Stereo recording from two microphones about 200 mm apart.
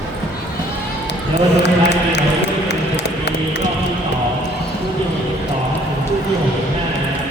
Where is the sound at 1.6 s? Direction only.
60° left (ahead or behind).